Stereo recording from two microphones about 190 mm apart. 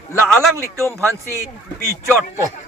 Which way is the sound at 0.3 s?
5° left (ahead or behind).